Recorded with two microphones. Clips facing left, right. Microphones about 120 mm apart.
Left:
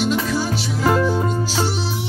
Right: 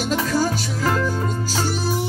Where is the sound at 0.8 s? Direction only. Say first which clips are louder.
Left 5 dB; 15° left (ahead or behind).